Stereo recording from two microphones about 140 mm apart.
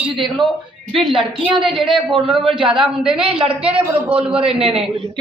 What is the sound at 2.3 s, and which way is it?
Speech, 35° right (ahead or behind).